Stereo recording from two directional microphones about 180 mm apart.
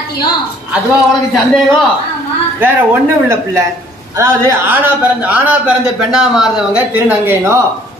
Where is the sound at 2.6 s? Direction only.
10° right (ahead or behind).